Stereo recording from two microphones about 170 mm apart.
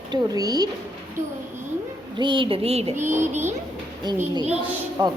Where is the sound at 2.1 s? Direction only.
30° right (ahead or behind).